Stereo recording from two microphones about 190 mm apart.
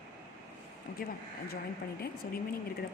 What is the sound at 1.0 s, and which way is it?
Speech, 50° left (ahead or behind).